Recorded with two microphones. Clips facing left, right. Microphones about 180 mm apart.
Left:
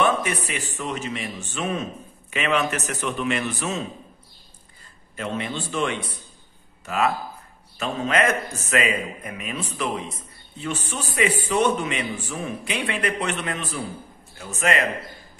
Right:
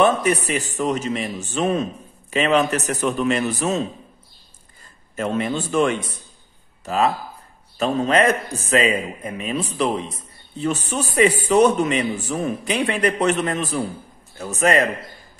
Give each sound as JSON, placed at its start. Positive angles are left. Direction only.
{"t": 0.0, "sound": "a man's voice", "side_deg": -40}
{"t": 5.1, "sound": "a man's voice", "side_deg": -45}
{"t": 7.8, "sound": "a man's voice", "side_deg": -35}